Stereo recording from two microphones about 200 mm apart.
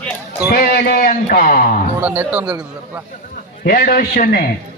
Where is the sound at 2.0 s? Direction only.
10° right (ahead or behind).